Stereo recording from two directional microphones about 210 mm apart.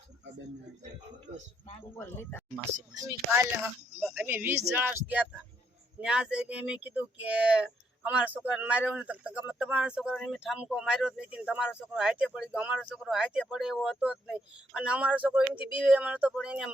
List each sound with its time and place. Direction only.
2.0 s speech: 10° left (ahead or behind)
2.9 s speech: 15° right (ahead or behind)